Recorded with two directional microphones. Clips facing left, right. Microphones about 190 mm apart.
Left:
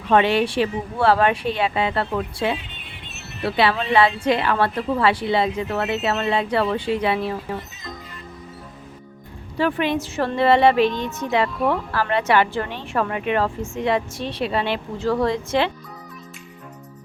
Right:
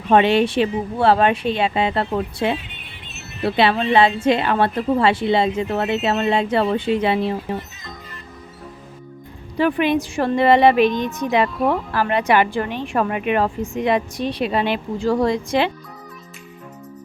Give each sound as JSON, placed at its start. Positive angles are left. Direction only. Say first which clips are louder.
{"t": 0.1, "sound": "a woman's voice", "louder": "right 3 dB", "side_deg": -25}
{"t": 9.6, "sound": "a woman's voice", "louder": "right 3 dB", "side_deg": -15}